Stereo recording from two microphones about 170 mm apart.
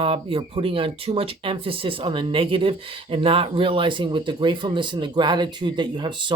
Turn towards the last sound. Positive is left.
turn(degrees=-25)  # may be behind; listen again after turning